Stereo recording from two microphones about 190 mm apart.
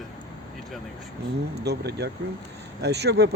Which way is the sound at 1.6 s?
60° right (ahead or behind).